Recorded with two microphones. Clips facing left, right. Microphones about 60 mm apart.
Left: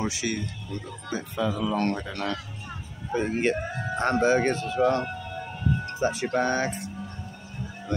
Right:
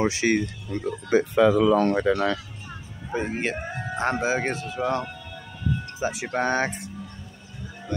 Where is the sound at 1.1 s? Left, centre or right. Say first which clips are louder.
Right 10 dB; right.